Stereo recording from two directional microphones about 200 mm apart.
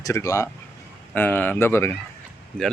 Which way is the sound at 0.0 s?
15° left (ahead or behind).